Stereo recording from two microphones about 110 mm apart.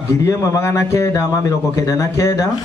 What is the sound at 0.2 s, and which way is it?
Speech, 25° left (ahead or behind).